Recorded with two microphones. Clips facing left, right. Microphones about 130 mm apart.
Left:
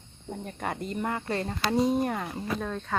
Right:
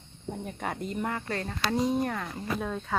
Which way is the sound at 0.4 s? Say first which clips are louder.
Left 2 dB; centre (ahead or behind).